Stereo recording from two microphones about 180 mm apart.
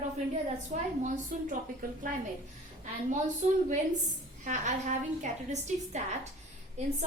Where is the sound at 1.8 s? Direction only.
55° right (ahead or behind).